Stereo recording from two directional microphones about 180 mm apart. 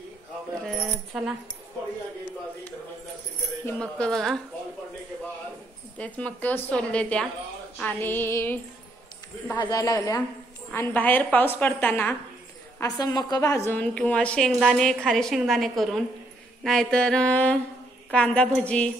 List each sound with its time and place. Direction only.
0.7 s speech: 5° right (ahead or behind)
3.6 s a woman's voice: 5° left (ahead or behind)
5.9 s a woman's voice: 10° left (ahead or behind)
9.6 s a woman's voice: 20° left (ahead or behind)
12.8 s a woman's voice: 20° left (ahead or behind)